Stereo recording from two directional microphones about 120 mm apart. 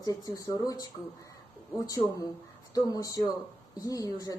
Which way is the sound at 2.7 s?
30° left (ahead or behind).